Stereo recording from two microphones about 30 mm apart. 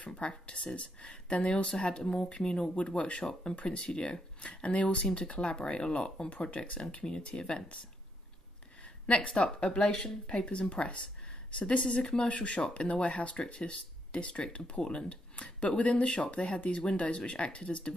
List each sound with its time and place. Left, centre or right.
0.0 s speech: left
5.0 s speech: left
5.3 s speech: left
8.8 s speech: left
12.3 s speech: left
15.0 s a sound: left
15.8 s speech: left